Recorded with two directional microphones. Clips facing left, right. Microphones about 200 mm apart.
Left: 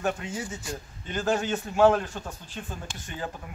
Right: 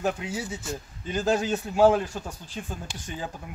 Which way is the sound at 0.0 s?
5° right (ahead or behind).